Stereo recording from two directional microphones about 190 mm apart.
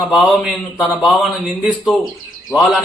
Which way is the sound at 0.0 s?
Centre (ahead or behind).